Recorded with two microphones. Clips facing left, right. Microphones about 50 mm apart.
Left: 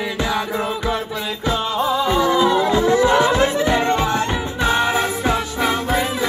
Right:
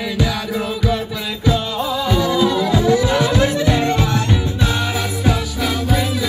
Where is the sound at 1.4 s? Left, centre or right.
Left.